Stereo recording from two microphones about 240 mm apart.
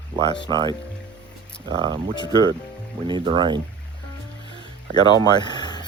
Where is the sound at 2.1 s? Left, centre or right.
Centre.